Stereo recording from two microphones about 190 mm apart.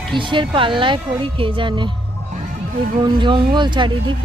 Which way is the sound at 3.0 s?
25° right (ahead or behind).